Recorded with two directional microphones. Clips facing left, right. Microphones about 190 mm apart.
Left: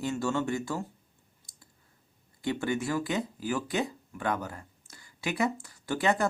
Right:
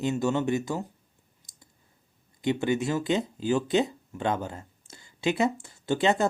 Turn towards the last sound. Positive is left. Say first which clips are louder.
# right 4 dB
turn(degrees=-25)  # may be behind; listen again after turning